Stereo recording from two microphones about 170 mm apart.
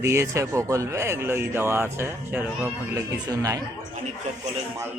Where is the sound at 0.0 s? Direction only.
15° right (ahead or behind).